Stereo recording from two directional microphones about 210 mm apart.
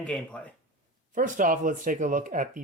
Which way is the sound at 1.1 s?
40° right (ahead or behind).